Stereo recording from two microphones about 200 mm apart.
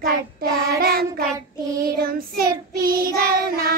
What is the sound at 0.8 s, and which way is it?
Child singing, 50° right (ahead or behind).